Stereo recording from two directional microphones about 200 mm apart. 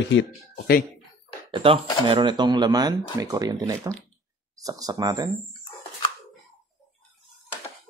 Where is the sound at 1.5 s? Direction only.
25° right (ahead or behind).